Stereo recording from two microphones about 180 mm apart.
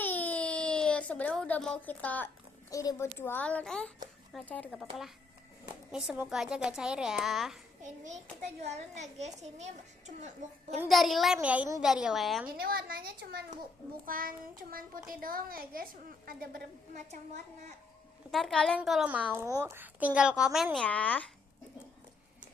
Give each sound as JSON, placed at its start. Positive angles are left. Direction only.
{"t": 0.0, "sound": "a sound", "side_deg": 10}
{"t": 3.2, "sound": "a woman's voice", "side_deg": 10}
{"t": 7.8, "sound": "a child's voice", "side_deg": -40}
{"t": 10.8, "sound": "a woman's voice", "side_deg": 0}
{"t": 12.5, "sound": "a child's voice", "side_deg": -55}
{"t": 18.3, "sound": "a woman's voice", "side_deg": 0}